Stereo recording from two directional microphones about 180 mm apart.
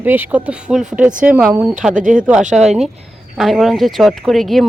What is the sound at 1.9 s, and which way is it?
Speech, 45° right (ahead or behind).